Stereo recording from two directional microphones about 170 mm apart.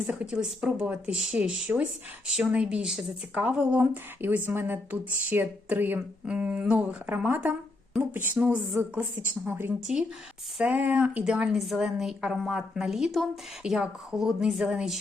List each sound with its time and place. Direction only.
0.1 s a woman's voice: 5° right (ahead or behind)